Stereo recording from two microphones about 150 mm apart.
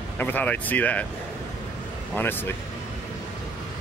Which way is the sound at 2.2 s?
15° left (ahead or behind).